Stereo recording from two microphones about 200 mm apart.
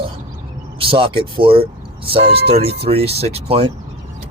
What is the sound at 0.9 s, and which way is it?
Speech, 25° right (ahead or behind).